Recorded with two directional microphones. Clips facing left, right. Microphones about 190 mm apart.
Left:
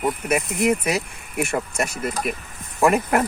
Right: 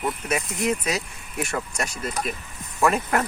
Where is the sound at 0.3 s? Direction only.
55° left (ahead or behind).